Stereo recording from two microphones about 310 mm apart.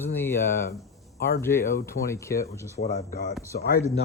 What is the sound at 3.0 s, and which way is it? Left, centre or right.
Speech, left.